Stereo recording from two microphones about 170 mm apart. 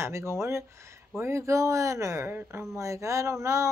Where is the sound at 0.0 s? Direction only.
15° right (ahead or behind).